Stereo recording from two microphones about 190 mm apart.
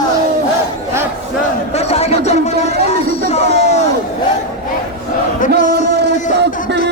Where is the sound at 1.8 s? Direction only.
35° left (ahead or behind).